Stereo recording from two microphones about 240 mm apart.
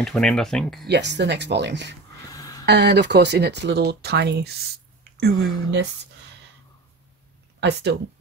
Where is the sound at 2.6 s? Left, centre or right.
Right.